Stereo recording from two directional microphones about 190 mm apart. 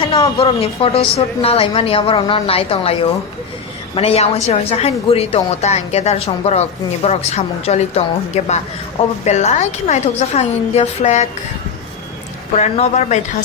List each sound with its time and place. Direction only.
0.3 s a woman's voice: 30° left (ahead or behind)
12.5 s a woman's voice: 35° left (ahead or behind)